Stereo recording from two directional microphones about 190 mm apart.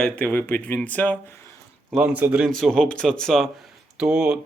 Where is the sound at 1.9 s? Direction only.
5° right (ahead or behind).